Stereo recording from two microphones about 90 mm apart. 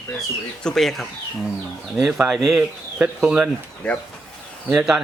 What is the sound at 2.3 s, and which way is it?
Speech, centre (ahead or behind).